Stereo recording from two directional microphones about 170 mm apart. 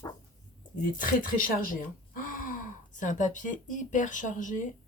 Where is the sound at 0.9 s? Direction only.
55° left (ahead or behind).